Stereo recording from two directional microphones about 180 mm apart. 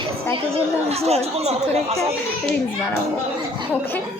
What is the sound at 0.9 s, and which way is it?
Speech, 35° right (ahead or behind).